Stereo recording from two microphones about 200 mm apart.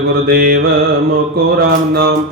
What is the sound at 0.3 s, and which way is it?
Mantra, 50° right (ahead or behind).